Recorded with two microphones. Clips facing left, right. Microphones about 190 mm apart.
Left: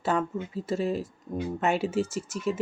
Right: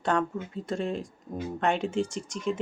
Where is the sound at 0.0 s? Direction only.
5° left (ahead or behind).